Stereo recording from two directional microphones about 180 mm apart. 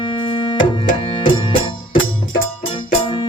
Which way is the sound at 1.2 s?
30° left (ahead or behind).